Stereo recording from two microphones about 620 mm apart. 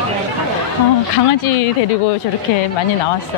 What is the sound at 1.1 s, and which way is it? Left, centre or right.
Speech, left.